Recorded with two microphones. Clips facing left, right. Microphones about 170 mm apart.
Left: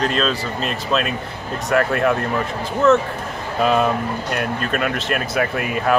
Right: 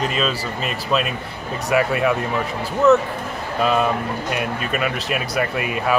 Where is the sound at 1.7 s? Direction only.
5° right (ahead or behind).